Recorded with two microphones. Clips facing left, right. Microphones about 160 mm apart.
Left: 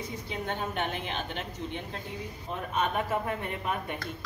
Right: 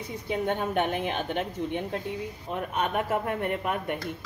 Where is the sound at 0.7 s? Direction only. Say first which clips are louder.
Right 6 dB; 50° right (ahead or behind).